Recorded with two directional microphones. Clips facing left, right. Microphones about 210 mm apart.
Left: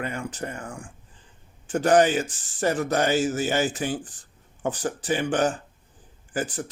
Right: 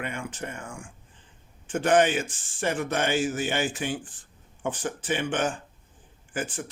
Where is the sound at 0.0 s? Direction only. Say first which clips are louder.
Left 3 dB; 35° left (ahead or behind).